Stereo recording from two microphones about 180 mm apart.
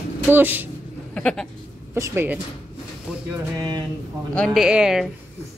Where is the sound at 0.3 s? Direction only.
10° right (ahead or behind).